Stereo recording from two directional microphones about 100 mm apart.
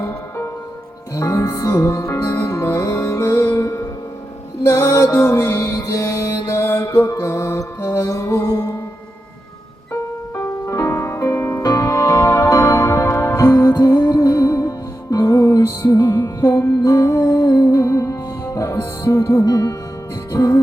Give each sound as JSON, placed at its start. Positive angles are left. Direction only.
{"t": 1.1, "sound": "music", "side_deg": 30}
{"t": 9.9, "sound": "music", "side_deg": 25}